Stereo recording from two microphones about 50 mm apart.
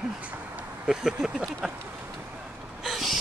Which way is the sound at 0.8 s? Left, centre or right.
Centre.